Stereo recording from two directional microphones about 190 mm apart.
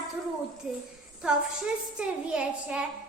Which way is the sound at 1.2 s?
5° right (ahead or behind).